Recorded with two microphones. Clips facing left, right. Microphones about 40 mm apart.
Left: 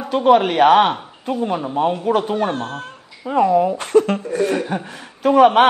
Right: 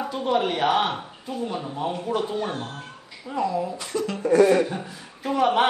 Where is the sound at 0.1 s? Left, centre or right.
Left.